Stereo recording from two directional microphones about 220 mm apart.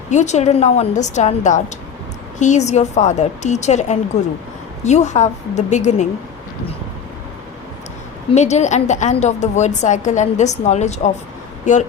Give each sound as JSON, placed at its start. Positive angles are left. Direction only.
{"t": 0.1, "sound": "a woman's voice", "side_deg": 30}
{"t": 8.3, "sound": "a woman's voice", "side_deg": 30}